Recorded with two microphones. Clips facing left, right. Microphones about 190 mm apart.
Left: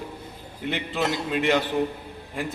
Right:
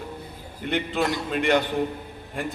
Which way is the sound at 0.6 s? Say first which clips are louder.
Right 2 dB; centre (ahead or behind).